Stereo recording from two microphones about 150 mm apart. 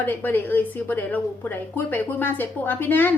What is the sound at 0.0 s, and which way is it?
A woman's voice, 15° left (ahead or behind).